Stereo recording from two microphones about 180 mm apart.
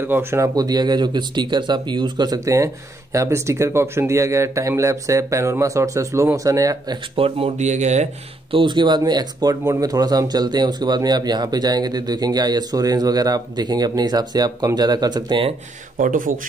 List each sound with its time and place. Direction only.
0.0 s speech: 15° right (ahead or behind)
7.2 s speech: 30° right (ahead or behind)
16.0 s speech: 50° right (ahead or behind)